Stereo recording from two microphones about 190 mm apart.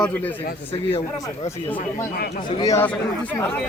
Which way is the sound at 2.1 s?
55° left (ahead or behind).